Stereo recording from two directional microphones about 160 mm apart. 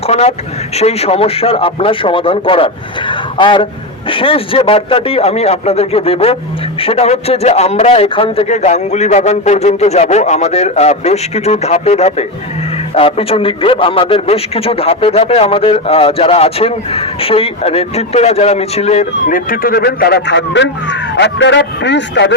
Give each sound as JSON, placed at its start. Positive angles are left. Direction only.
{"t": 0.1, "sound": "a man's voice", "side_deg": 40}
{"t": 19.5, "sound": "a man's voice", "side_deg": 70}